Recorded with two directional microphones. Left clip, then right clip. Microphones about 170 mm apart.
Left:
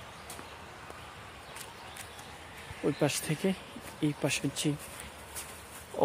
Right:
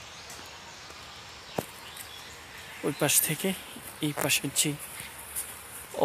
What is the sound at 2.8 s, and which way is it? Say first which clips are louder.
Speech: right 3 dB; centre (ahead or behind).